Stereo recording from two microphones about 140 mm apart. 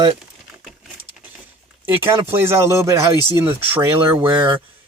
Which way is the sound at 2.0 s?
15° right (ahead or behind).